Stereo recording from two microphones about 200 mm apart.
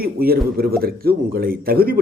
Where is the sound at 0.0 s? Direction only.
50° right (ahead or behind).